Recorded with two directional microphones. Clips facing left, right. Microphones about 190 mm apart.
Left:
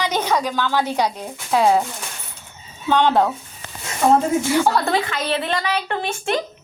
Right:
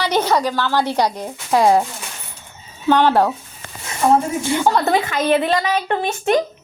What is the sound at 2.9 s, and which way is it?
Speech, 10° right (ahead or behind).